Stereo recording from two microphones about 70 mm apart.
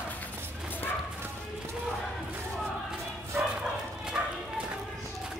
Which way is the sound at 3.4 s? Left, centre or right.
Centre.